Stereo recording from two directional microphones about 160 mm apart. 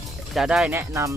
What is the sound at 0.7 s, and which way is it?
Speech, 20° right (ahead or behind).